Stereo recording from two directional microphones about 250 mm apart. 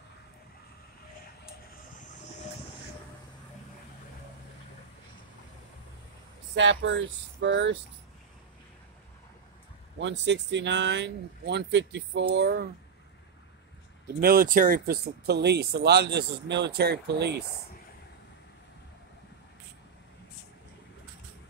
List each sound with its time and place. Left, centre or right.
6.5 s speech: right
9.9 s speech: right
14.2 s speech: right